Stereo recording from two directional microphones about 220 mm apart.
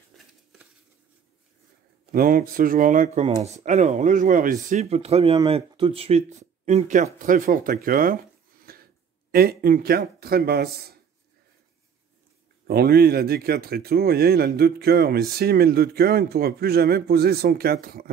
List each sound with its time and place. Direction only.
2.1 s speech: 40° right (ahead or behind)
12.6 s speech: 45° right (ahead or behind)